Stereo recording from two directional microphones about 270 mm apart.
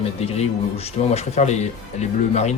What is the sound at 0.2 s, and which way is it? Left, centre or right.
Speech, left.